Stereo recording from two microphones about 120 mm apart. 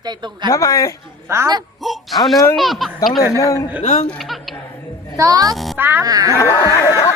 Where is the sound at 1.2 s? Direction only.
20° right (ahead or behind).